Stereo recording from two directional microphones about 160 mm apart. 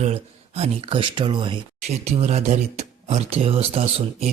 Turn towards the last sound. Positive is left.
turn(degrees=-40)  # may be behind; listen again after turning